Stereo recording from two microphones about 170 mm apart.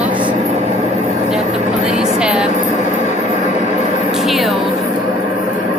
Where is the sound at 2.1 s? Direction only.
5° right (ahead or behind).